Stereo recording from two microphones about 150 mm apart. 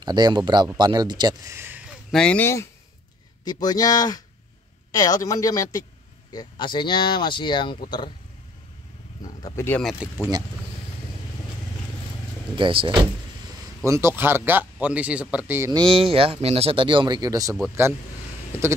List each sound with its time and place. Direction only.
0.0 s speech: 30° right (ahead or behind)
2.0 s speech: 5° left (ahead or behind)
3.4 s speech: 25° left (ahead or behind)
9.2 s wild animals: 25° left (ahead or behind)
9.7 s speech: 5° left (ahead or behind)
9.9 s speech: 15° right (ahead or behind)
12.5 s speech: 35° right (ahead or behind)
13.8 s speech: 20° right (ahead or behind)
15.7 s speech: 35° right (ahead or behind)